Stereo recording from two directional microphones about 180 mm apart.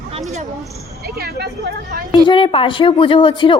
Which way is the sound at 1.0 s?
60° right (ahead or behind).